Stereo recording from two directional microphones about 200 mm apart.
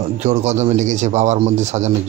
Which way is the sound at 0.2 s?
35° right (ahead or behind).